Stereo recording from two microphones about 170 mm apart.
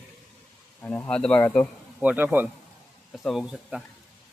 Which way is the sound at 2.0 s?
10° right (ahead or behind).